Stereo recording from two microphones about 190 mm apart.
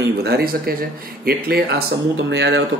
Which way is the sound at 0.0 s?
55° right (ahead or behind).